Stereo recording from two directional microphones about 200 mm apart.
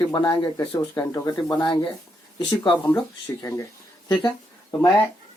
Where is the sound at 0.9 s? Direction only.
15° left (ahead or behind).